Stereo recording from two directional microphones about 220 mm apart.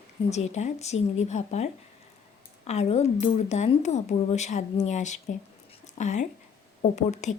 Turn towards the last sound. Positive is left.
turn(degrees=30)  # may be behind; listen again after turning